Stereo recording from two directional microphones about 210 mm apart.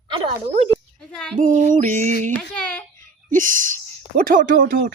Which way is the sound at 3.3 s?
40° right (ahead or behind).